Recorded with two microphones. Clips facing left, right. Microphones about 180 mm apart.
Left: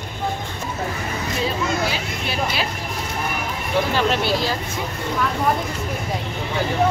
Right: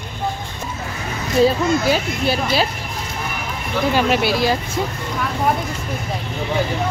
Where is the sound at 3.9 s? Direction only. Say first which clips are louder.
Right 5 dB; 10° right (ahead or behind).